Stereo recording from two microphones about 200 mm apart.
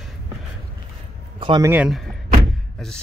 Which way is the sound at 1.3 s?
20° right (ahead or behind).